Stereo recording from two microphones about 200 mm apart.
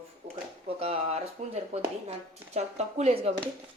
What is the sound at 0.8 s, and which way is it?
Speech, 30° right (ahead or behind).